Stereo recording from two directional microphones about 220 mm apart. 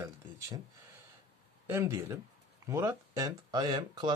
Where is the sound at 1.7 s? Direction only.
10° right (ahead or behind).